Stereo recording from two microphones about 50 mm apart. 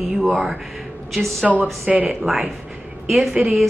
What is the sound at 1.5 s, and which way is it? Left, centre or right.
Speech, centre.